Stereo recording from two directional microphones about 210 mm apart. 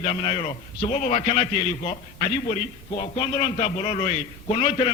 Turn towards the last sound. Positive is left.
turn(degrees=30)  # may be behind; listen again after turning